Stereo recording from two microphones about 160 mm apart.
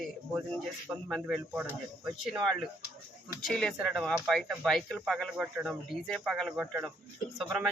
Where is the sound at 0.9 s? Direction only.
5° right (ahead or behind).